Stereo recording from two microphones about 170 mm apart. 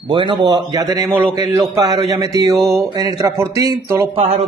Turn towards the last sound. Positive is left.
turn(degrees=-40)  # may be behind; listen again after turning